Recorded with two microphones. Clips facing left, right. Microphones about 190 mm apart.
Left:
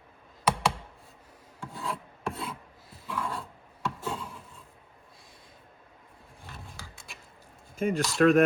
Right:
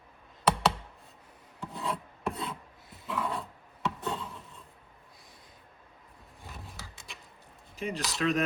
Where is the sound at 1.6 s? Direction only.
Centre (ahead or behind).